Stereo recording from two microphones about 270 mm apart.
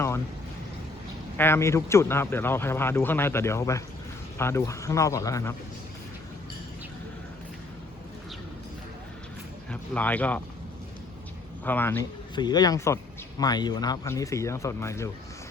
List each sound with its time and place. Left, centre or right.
1.4 s speech: centre
9.6 s speech: centre
11.6 s speech: centre